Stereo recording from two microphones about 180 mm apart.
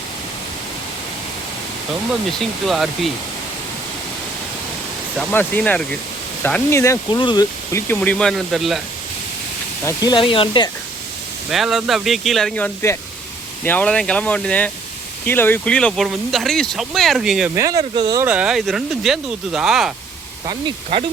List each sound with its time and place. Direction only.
2.4 s speech: centre (ahead or behind)
5.3 s speech: 10° left (ahead or behind); by 7.4 s 25° left (ahead or behind)
7.7 s speech: 10° left (ahead or behind)
9.8 s speech: 20° left (ahead or behind)
11.5 s speech: centre (ahead or behind)
17.5 s speech: 20° right (ahead or behind)
18.3 s speech: 5° right (ahead or behind)
20.5 s speech: 25° right (ahead or behind)